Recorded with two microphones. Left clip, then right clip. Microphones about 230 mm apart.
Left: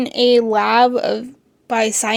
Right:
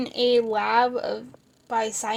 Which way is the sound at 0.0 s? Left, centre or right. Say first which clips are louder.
Left 7 dB; left.